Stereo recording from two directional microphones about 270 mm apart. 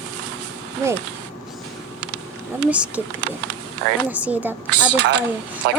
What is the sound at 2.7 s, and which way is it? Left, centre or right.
Speech, centre.